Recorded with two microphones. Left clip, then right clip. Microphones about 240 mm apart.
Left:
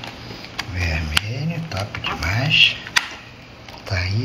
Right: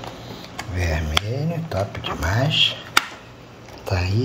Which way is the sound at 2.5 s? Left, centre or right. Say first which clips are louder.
Left 5 dB; right.